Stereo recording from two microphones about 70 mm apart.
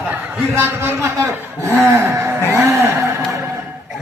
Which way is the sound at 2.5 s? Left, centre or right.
Right.